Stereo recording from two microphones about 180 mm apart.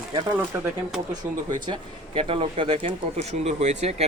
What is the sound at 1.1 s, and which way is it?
Speech, 25° right (ahead or behind).